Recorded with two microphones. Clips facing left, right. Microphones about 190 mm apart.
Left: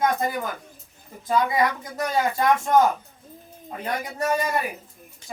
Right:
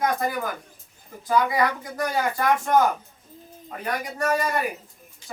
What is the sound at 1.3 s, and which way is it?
Speech, 20° left (ahead or behind).